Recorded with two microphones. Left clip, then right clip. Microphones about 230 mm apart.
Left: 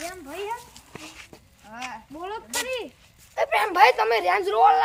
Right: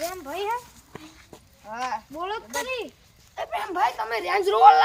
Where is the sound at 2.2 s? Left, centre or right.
Centre.